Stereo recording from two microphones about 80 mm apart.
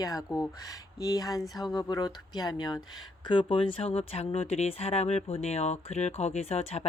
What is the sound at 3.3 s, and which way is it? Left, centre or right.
Speech, left.